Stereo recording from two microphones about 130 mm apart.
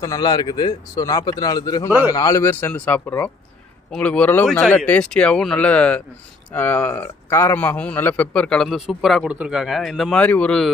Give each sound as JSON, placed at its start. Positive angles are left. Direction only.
{"t": 0.0, "sound": "a man's voice", "side_deg": 30}